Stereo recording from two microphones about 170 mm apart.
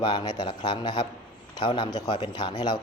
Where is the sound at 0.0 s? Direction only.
30° left (ahead or behind).